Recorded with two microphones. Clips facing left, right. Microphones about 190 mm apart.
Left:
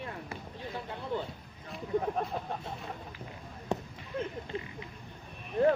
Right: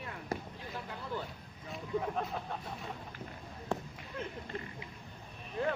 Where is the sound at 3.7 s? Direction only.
20° left (ahead or behind).